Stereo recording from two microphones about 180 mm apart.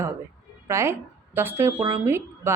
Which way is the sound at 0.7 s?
15° right (ahead or behind).